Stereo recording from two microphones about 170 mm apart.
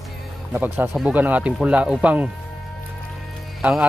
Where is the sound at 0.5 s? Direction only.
10° right (ahead or behind).